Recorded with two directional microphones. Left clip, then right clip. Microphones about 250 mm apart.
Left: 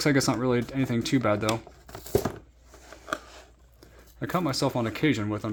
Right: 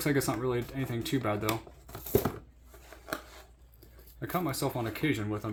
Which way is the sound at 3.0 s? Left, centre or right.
Centre.